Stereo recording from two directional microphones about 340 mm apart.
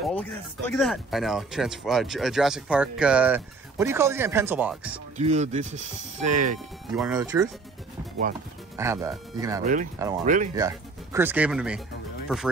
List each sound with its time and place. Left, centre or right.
0.0 s speech: centre
5.1 s speech: centre
7.0 s speech: centre
8.7 s speech: centre
10.2 s speech: right
10.5 s speech: centre